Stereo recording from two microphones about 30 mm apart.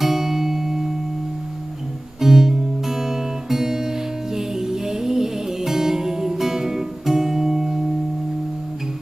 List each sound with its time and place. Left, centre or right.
0.0 s music: centre
2.2 s music: centre